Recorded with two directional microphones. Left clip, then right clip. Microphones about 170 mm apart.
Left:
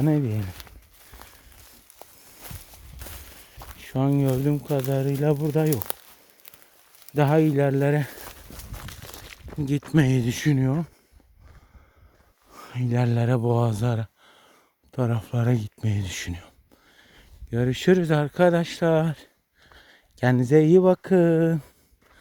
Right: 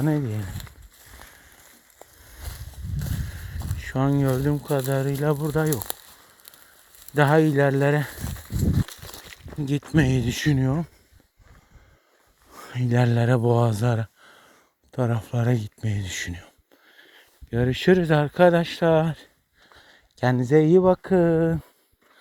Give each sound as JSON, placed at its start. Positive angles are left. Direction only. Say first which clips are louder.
{"t": 0.0, "sound": "speech", "louder": "left 1 dB", "side_deg": 35}
{"t": 3.8, "sound": "speech", "louder": "right 1 dB", "side_deg": 10}
{"t": 5.7, "sound": "speech", "louder": "left 1 dB", "side_deg": -45}
{"t": 7.1, "sound": "speech", "louder": "right 2 dB", "side_deg": 10}
{"t": 8.1, "sound": "walk", "louder": "right 4 dB", "side_deg": -45}
{"t": 9.9, "sound": "speech", "louder": "even", "side_deg": 20}
{"t": 12.6, "sound": "speech", "louder": "right 3 dB", "side_deg": -10}
{"t": 14.9, "sound": "speech", "louder": "right 1 dB", "side_deg": 15}
{"t": 16.9, "sound": "speech", "louder": "right 3 dB", "side_deg": 5}
{"t": 19.7, "sound": "a sound", "louder": "even", "side_deg": 15}
{"t": 20.3, "sound": "speech", "louder": "even", "side_deg": 25}